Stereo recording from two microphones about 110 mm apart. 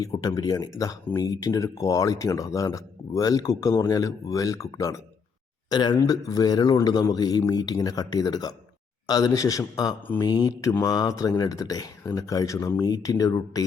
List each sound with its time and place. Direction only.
0.0 s speech: 35° left (ahead or behind)
5.6 s speech: 40° left (ahead or behind)